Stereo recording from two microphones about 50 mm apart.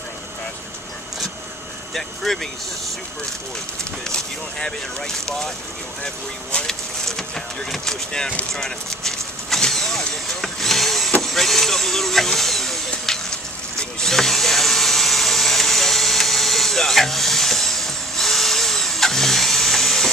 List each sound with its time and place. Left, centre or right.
2.0 s speech: centre
4.1 s speech: centre
8.5 s vehicle: centre
11.2 s a sound: centre